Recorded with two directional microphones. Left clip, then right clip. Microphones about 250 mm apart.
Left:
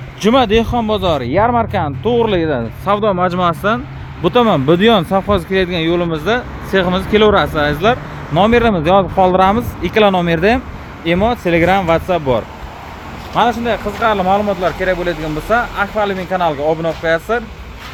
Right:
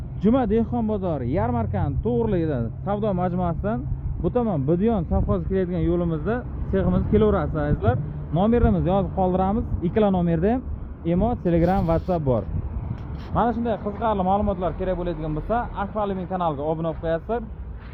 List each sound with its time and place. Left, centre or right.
0.2 s speech: centre
4.4 s speech: left
4.7 s speech: left
5.5 s speech: centre
13.7 s speech: left